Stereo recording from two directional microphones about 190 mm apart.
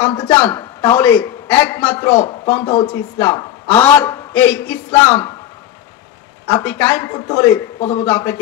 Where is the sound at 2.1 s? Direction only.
30° left (ahead or behind).